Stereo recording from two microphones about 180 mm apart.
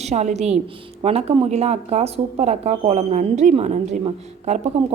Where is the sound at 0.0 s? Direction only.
40° right (ahead or behind).